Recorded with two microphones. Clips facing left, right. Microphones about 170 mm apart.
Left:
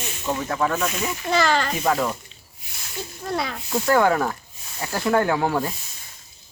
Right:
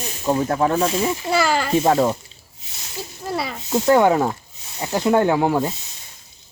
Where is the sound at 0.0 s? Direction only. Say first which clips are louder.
Right 6 dB; 35° right (ahead or behind).